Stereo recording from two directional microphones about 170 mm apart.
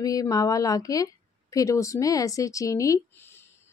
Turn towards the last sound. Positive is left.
turn(degrees=20)  # may be behind; listen again after turning